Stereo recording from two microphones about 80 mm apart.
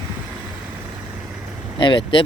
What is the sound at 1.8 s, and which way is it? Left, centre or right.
Speech, left.